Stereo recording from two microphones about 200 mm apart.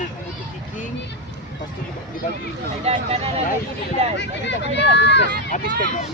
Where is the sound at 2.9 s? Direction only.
30° right (ahead or behind).